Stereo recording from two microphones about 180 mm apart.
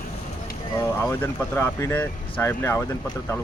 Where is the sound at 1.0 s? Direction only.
15° left (ahead or behind).